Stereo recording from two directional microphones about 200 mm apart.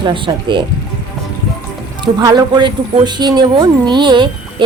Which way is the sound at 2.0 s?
20° right (ahead or behind).